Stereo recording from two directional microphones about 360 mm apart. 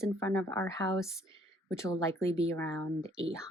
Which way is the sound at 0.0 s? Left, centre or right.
Centre.